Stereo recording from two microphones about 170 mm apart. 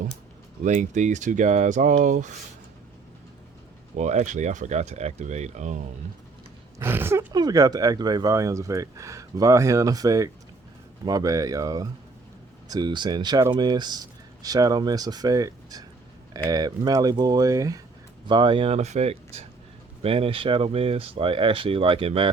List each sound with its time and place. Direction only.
0.6 s speech: 45° right (ahead or behind)
3.9 s speech: 45° right (ahead or behind)
6.7 s speech: 15° right (ahead or behind); by 22.3 s 30° right (ahead or behind)